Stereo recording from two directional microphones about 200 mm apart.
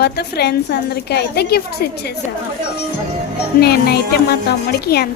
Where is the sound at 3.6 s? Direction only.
50° left (ahead or behind).